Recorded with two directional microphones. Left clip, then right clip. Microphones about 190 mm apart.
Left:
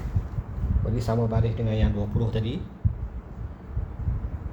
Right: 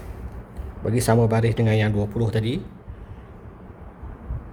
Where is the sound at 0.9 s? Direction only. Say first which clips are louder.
Right 8 dB; 55° right (ahead or behind); by 2.6 s 35° right (ahead or behind).